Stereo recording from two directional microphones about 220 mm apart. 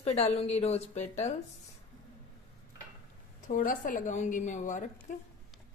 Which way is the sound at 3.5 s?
35° left (ahead or behind).